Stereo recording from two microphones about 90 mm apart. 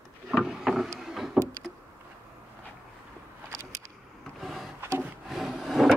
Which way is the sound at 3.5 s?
35° right (ahead or behind).